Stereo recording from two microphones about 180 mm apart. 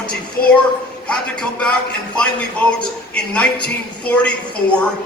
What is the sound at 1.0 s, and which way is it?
A man's voice, 5° left (ahead or behind).